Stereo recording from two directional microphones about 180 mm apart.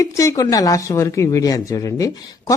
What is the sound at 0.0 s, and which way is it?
Speech, 15° left (ahead or behind).